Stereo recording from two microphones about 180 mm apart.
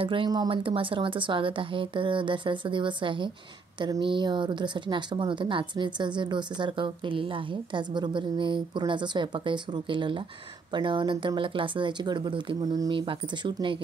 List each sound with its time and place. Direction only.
0.0 s speech: 30° right (ahead or behind)